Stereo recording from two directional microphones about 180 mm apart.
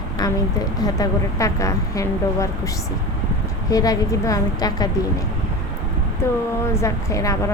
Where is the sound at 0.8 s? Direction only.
20° left (ahead or behind).